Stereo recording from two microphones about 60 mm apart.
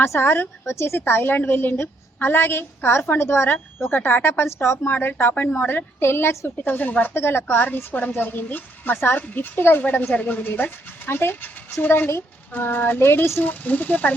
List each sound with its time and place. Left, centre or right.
0.0 s a woman's voice: left
4.9 s a woman's voice: left
5.3 s a woman's voice: left
5.5 s a woman's voice: left
7.2 s a woman's voice: left